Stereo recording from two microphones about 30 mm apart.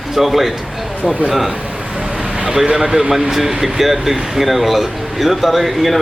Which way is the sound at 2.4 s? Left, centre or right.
Right.